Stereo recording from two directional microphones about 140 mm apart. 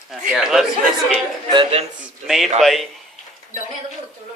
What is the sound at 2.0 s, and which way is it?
Speech, centre (ahead or behind).